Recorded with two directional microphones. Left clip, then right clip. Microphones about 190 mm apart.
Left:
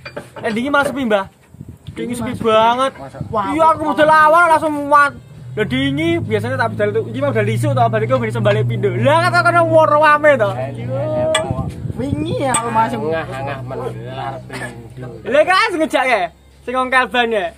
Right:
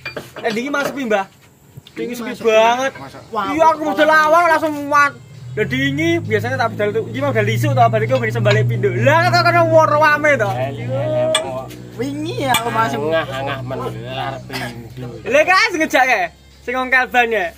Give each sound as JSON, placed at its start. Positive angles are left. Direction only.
{"t": 0.4, "sound": "speech", "side_deg": 5}
{"t": 11.0, "sound": "a sound", "side_deg": -25}
{"t": 12.0, "sound": "speech", "side_deg": 45}
{"t": 13.0, "sound": "speech", "side_deg": -30}
{"t": 15.2, "sound": "speech", "side_deg": 0}